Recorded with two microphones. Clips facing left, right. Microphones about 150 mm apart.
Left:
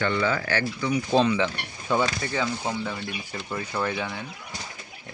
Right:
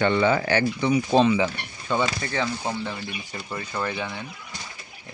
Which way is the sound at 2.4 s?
5° right (ahead or behind).